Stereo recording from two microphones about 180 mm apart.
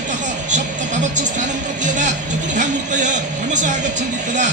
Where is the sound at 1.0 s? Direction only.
40° right (ahead or behind).